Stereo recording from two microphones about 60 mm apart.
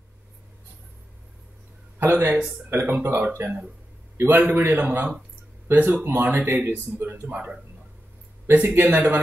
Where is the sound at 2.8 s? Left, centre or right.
Right.